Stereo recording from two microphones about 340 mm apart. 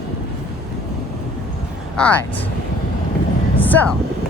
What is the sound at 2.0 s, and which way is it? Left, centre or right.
Speech, centre.